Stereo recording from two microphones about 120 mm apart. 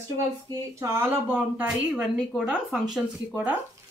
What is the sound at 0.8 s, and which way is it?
Speech, 20° right (ahead or behind).